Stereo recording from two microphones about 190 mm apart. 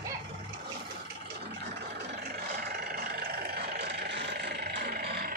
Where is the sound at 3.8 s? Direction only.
65° right (ahead or behind).